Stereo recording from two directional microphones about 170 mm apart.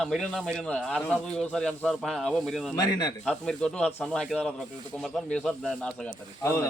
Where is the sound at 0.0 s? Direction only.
Centre (ahead or behind).